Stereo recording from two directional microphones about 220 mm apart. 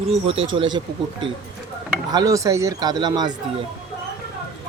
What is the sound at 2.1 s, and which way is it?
Speech, 15° right (ahead or behind).